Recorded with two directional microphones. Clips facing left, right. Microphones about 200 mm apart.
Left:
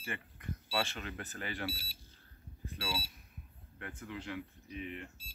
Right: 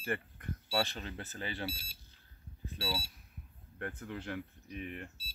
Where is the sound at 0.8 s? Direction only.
35° right (ahead or behind).